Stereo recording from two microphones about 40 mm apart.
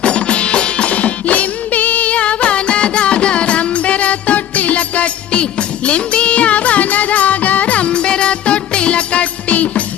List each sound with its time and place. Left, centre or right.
0.0 s music: left